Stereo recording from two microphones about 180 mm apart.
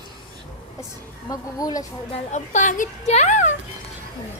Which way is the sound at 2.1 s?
40° left (ahead or behind).